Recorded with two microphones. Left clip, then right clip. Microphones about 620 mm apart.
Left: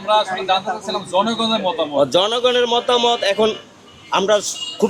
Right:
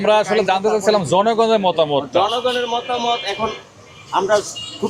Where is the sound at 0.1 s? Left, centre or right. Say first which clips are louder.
Right 1 dB; right.